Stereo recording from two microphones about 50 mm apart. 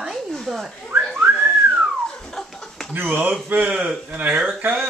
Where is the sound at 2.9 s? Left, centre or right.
Right.